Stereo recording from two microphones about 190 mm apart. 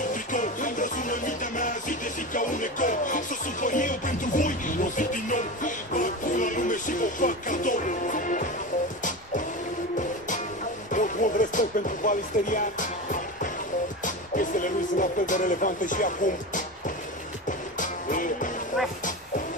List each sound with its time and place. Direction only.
0.1 s music: 45° left (ahead or behind)
10.9 s music: 45° left (ahead or behind)